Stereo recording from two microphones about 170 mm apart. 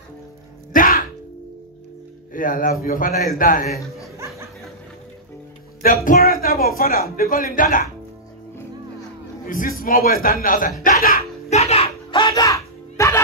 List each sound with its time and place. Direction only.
0.7 s music: 55° left (ahead or behind)
2.3 s a man's voice: 50° left (ahead or behind)
6.0 s a man's voice: 60° left (ahead or behind)
9.5 s a man's voice: 55° left (ahead or behind)
11.5 s a sound: 35° left (ahead or behind); by 13.2 s 15° left (ahead or behind)